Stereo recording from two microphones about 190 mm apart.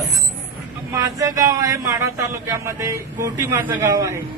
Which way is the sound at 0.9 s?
15° right (ahead or behind).